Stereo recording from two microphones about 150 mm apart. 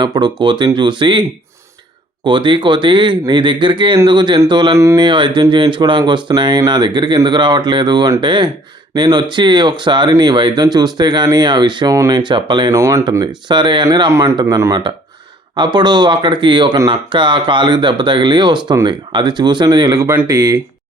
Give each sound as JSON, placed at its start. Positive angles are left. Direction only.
{"t": 0.0, "sound": "speech", "side_deg": -30}
{"t": 2.2, "sound": "speech", "side_deg": -30}
{"t": 12.7, "sound": "speech", "side_deg": -20}
{"t": 13.5, "sound": "speech", "side_deg": -30}